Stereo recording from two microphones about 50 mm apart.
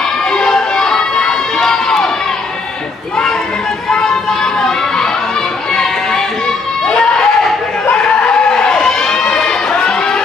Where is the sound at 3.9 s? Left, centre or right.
Centre.